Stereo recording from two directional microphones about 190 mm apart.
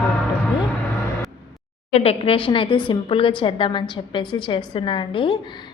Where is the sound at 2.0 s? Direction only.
30° left (ahead or behind).